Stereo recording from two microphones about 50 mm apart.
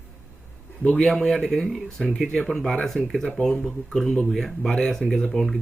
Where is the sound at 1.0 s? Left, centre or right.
Centre.